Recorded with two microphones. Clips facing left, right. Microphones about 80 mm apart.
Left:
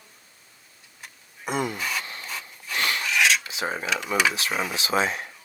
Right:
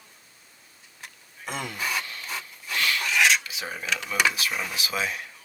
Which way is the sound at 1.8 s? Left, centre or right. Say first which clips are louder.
Even; centre.